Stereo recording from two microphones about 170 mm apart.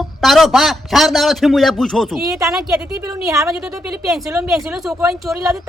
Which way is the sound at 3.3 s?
15° right (ahead or behind).